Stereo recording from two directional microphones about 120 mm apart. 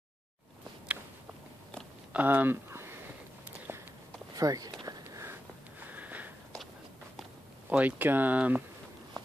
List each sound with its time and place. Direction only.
0.9 s a sound: 10° right (ahead or behind)
2.1 s speech: 15° right (ahead or behind)
3.5 s walk: 20° right (ahead or behind)
4.4 s speech: 30° right (ahead or behind)
4.8 s a sound: 30° right (ahead or behind)
5.9 s sniff: 15° right (ahead or behind)
7.7 s speech: 15° right (ahead or behind)